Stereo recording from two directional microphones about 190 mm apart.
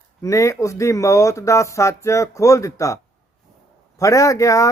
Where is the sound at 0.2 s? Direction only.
15° left (ahead or behind).